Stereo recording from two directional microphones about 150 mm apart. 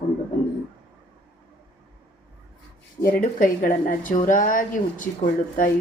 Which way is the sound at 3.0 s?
65° left (ahead or behind).